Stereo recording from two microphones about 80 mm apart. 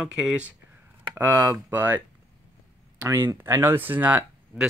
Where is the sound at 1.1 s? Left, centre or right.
Right.